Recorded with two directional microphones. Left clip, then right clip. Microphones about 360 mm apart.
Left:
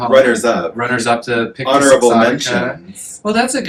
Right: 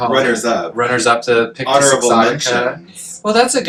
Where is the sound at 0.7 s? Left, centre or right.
Centre.